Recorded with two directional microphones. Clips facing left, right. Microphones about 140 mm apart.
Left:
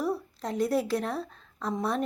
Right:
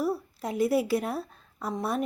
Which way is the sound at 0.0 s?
10° right (ahead or behind).